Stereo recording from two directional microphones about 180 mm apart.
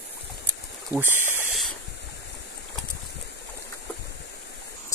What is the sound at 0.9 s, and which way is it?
Speech, 20° left (ahead or behind).